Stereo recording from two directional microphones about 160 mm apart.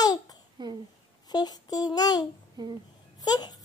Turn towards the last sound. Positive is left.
turn(degrees=25)  # may be behind; listen again after turning